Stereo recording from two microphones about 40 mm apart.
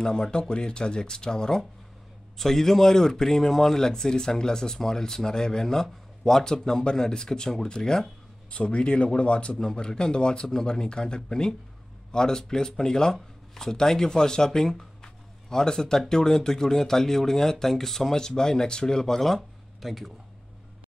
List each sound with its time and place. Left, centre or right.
0.0 s speech: centre
8.5 s speech: left; by 20.1 s centre